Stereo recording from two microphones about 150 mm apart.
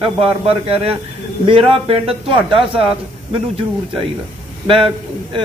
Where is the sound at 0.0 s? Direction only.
40° right (ahead or behind).